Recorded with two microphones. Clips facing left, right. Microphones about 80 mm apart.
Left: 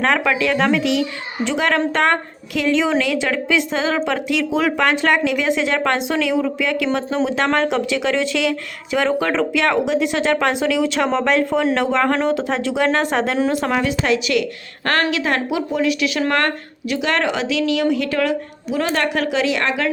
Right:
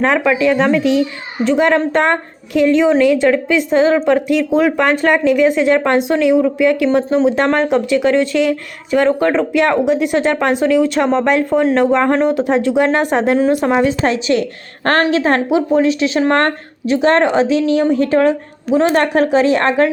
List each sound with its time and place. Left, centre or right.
0.0 s a woman's voice: centre
13.7 s speech: right